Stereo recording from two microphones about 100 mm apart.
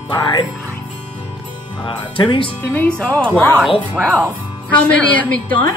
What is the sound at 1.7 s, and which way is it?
Speech, 55° left (ahead or behind).